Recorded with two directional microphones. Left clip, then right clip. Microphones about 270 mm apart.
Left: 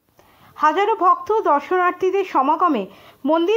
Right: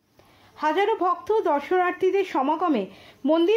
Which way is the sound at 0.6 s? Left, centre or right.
Centre.